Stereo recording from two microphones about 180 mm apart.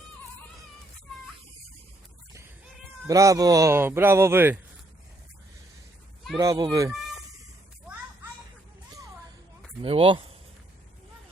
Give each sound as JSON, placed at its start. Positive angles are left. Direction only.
{"t": 3.1, "sound": "speech", "side_deg": -20}
{"t": 6.3, "sound": "speech", "side_deg": -20}
{"t": 9.8, "sound": "speech", "side_deg": -30}